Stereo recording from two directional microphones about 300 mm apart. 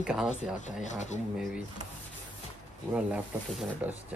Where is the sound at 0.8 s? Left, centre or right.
Left.